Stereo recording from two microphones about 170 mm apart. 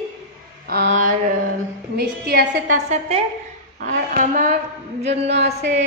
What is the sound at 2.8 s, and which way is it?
Speech, 35° right (ahead or behind).